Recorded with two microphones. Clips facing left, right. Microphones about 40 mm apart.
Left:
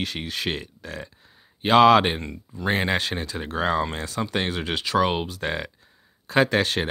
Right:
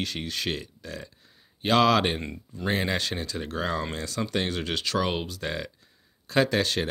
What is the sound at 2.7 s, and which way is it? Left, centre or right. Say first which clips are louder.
Speech: left 4 dB; left.